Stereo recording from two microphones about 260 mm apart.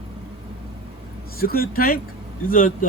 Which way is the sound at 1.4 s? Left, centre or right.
Left.